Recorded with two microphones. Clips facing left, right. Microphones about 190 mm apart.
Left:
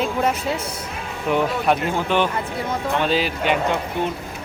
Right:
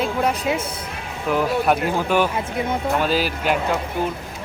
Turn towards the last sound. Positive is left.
turn(degrees=-5)  # may be behind; listen again after turning